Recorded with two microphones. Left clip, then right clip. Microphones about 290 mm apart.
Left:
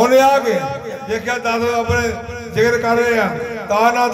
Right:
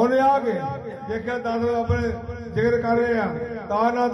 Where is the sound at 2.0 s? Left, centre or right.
Left.